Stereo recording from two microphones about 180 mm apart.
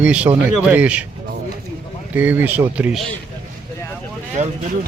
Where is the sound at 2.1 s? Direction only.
10° right (ahead or behind).